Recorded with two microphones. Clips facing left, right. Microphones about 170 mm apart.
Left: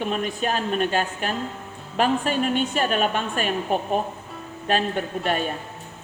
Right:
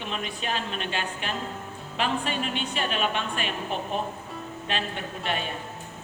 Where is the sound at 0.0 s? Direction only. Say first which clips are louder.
Left 8 dB; 45° left (ahead or behind).